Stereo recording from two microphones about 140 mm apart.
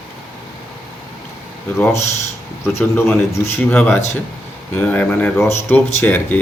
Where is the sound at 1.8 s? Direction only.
20° left (ahead or behind).